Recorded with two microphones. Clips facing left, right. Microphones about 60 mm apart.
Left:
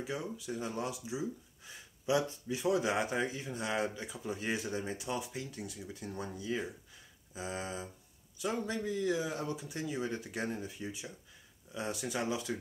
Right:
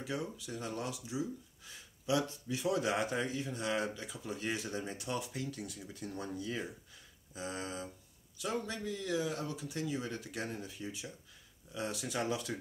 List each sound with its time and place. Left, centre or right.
0.0 s speech: centre
12.2 s speech: centre